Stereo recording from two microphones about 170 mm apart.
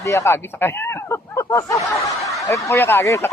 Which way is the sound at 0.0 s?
20° left (ahead or behind).